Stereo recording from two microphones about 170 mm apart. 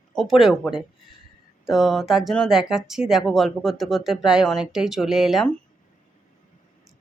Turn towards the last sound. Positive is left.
turn(degrees=0)  # may be behind; listen again after turning